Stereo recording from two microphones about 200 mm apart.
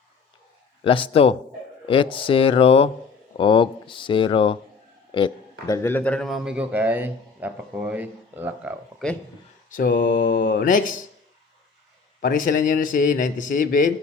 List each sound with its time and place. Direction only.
1.1 s a man's voice: 30° left (ahead or behind); by 8.7 s 10° right (ahead or behind)
9.0 s a man's voice: 5° left (ahead or behind)
9.6 s speech: 45° left (ahead or behind)
12.2 s speech: 40° left (ahead or behind)